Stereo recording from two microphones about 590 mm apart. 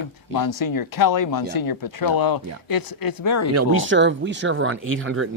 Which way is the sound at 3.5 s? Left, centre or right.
Centre.